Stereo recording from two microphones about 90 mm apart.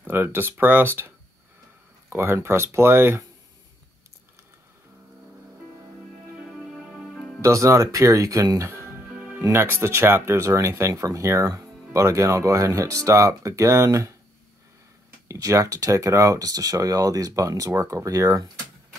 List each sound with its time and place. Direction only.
0.0 s speech: 25° right (ahead or behind)
6.3 s music: 5° right (ahead or behind)
7.1 s music: 10° left (ahead or behind)
7.4 s speech: 35° right (ahead or behind)
15.2 s speech: 40° right (ahead or behind)